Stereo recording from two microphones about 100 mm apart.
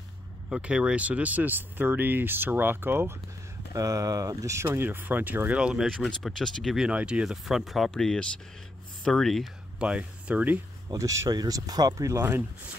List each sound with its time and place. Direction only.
0.5 s speech: 10° right (ahead or behind)
3.7 s speech: 35° right (ahead or behind); by 5.9 s 10° right (ahead or behind)
5.9 s speech: 5° left (ahead or behind)
6.9 s speech: 10° right (ahead or behind)
9.8 s speech: 10° right (ahead or behind)
10.9 s speech: 35° right (ahead or behind)